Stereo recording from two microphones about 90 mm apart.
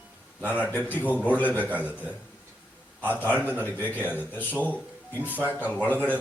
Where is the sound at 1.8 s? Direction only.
15° right (ahead or behind).